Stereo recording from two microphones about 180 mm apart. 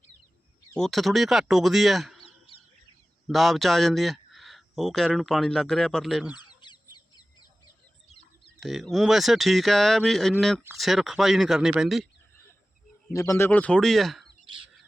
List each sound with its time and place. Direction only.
0.8 s speech: centre (ahead or behind)
3.2 s speech: centre (ahead or behind)
6.3 s chicken: 25° left (ahead or behind)
8.6 s speech: centre (ahead or behind)
13.1 s speech: 15° left (ahead or behind); by 14.3 s centre (ahead or behind)